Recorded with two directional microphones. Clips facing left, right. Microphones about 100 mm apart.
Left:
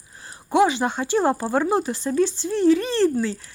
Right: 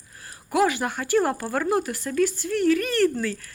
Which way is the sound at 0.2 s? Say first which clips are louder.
Left 3 dB; 25° left (ahead or behind).